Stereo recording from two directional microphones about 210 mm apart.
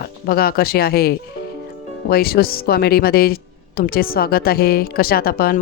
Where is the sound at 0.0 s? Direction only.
45° left (ahead or behind).